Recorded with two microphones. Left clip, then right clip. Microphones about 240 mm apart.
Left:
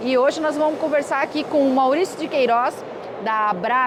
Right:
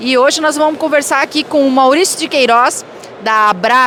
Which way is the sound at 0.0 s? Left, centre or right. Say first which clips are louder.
Right 8 dB; right.